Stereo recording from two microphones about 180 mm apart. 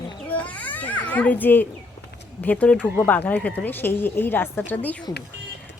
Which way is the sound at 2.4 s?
10° left (ahead or behind).